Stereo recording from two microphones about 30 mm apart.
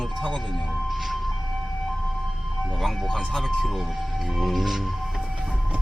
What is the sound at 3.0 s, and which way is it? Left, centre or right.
Music, centre.